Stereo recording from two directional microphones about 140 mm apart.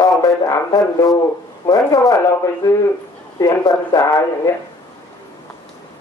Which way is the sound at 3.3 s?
25° left (ahead or behind).